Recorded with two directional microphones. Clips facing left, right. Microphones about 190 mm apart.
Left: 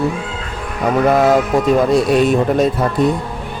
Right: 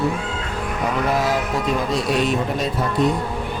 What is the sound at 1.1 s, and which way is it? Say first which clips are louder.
Speech: left 10 dB; 55° left (ahead or behind).